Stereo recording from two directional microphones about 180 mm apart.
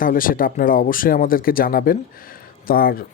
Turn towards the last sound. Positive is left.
turn(degrees=55)  # may be behind; listen again after turning